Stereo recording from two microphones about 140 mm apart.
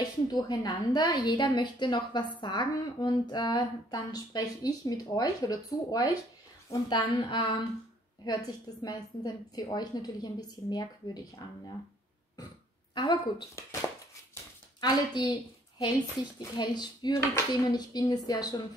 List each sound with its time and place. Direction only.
0.3 s a woman's voice: 30° left (ahead or behind)
12.9 s a woman's voice: 35° left (ahead or behind)
13.6 s a woman's voice: 20° left (ahead or behind)